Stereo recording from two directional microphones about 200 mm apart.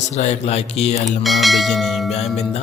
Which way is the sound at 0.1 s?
35° left (ahead or behind).